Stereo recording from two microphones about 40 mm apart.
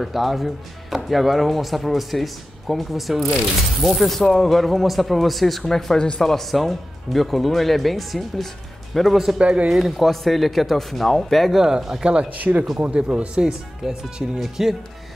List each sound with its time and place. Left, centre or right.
0.0 s speech: centre
5.9 s speech: left
6.2 s speech: centre
9.4 s speech: right
9.7 s speech: centre
11.5 s speech: centre
12.0 s speech: right
12.4 s speech: right
12.9 s speech: right
13.8 s speech: centre